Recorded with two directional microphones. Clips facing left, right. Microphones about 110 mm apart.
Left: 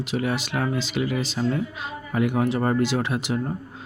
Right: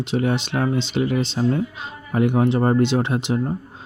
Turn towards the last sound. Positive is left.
turn(degrees=-25)  # may be behind; listen again after turning